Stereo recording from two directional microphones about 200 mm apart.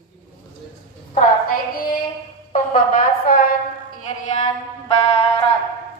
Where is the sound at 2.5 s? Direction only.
40° left (ahead or behind).